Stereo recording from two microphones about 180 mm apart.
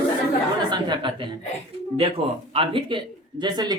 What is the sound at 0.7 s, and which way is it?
Speech, 25° right (ahead or behind).